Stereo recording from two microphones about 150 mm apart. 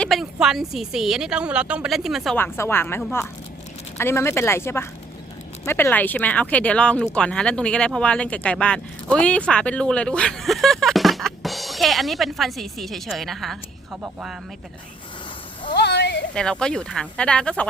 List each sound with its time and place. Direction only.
0.0 s speech: centre (ahead or behind)
2.3 s speech: 15° left (ahead or behind); by 14.3 s 5° right (ahead or behind)
15.8 s a sound: 90° left
16.3 s speech: 5° left (ahead or behind)